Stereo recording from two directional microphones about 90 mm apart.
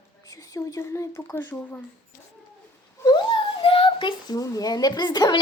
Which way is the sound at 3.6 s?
85° left.